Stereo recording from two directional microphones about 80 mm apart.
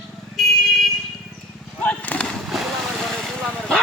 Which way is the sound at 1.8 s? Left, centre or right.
Centre.